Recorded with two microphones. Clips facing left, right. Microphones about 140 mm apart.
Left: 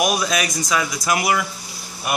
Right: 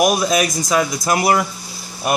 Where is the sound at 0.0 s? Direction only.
25° right (ahead or behind).